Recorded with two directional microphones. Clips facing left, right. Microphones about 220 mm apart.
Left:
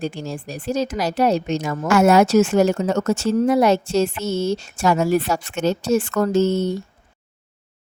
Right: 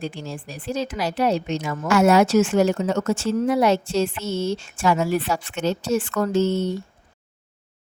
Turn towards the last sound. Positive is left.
turn(degrees=45)  # may be behind; listen again after turning